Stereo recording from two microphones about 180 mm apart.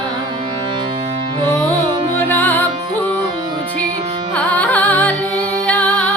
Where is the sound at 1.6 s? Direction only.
25° right (ahead or behind).